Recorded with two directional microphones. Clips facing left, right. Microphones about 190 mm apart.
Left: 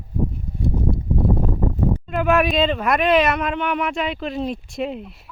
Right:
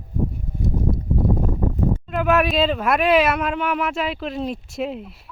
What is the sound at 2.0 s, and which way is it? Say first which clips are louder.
Speech: left 1 dB; centre (ahead or behind).